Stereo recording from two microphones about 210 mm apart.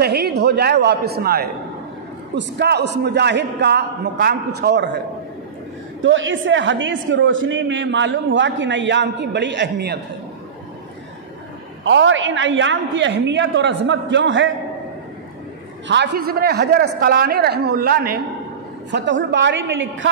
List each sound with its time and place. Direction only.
0.0 s speech: 50° right (ahead or behind)
6.0 s a man's voice: 65° right (ahead or behind)
11.8 s a man's voice: 65° right (ahead or behind)
15.9 s speech: 55° right (ahead or behind)
18.9 s a man's voice: 60° right (ahead or behind)